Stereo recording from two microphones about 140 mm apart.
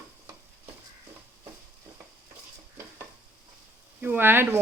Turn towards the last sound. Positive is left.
turn(degrees=-15)  # may be behind; listen again after turning